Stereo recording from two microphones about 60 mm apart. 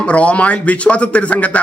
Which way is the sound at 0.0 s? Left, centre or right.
Left.